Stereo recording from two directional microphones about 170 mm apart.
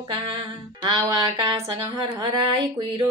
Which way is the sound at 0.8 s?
25° right (ahead or behind).